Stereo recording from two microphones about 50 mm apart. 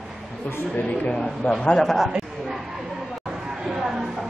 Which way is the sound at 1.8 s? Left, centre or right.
Centre.